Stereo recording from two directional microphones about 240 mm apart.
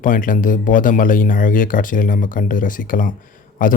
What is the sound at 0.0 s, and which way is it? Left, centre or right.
Speech, left.